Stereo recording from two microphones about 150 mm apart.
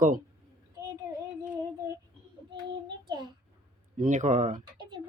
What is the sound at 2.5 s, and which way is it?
Child singing, 30° right (ahead or behind).